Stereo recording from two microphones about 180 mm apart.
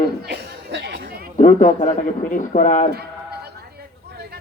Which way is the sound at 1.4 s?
45° left (ahead or behind).